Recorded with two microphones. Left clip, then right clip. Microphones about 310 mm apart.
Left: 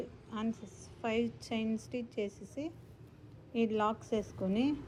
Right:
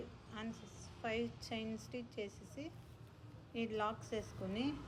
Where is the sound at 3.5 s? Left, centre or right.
Centre.